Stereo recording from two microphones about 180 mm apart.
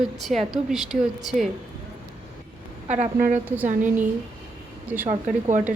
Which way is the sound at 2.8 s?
40° right (ahead or behind).